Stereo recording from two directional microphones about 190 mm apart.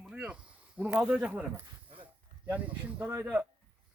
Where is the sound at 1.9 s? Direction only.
25° right (ahead or behind).